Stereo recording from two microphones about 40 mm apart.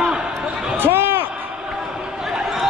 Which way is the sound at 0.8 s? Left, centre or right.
Right.